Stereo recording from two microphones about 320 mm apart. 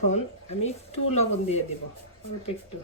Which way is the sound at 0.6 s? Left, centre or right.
Centre.